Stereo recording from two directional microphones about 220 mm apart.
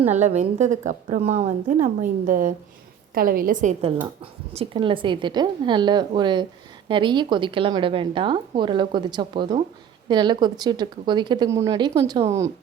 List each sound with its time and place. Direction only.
0.0 s a woman's voice: 30° right (ahead or behind); by 12.5 s 15° right (ahead or behind)